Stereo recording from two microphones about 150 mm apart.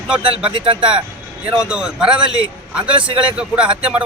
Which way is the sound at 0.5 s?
35° right (ahead or behind).